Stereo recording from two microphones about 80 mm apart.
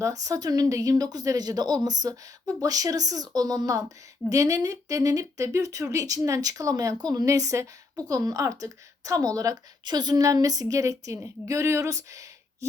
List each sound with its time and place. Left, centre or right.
0.0 s speech: right
9.8 s speech: right